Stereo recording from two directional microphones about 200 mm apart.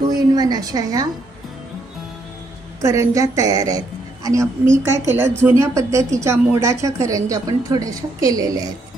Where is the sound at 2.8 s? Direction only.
15° right (ahead or behind).